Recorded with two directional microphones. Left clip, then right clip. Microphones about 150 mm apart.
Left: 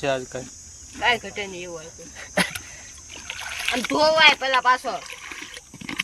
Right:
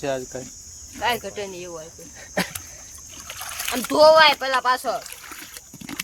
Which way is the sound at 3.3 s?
30° right (ahead or behind).